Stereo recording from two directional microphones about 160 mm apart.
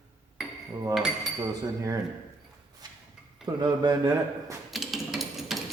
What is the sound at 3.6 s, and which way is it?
Speech, 25° right (ahead or behind).